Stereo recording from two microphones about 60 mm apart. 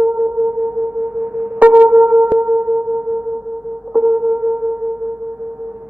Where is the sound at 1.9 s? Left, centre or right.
Centre.